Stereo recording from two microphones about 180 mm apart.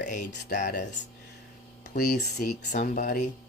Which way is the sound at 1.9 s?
45° left (ahead or behind).